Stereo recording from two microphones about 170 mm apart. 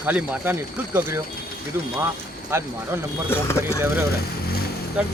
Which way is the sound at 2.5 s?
15° right (ahead or behind).